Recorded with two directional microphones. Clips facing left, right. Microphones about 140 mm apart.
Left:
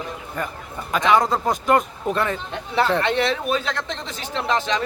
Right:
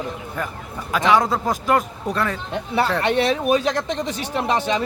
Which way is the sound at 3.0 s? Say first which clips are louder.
Right 2 dB; 15° right (ahead or behind).